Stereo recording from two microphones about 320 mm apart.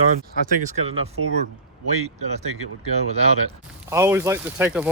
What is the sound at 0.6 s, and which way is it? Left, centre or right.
Speech, right.